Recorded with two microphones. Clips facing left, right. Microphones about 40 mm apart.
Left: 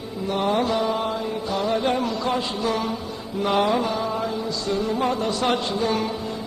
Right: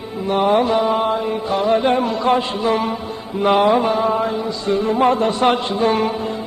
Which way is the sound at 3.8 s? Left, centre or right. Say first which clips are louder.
Right 7 dB; right.